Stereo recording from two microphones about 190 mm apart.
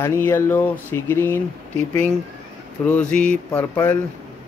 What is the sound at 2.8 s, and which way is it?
Speech, 5° left (ahead or behind).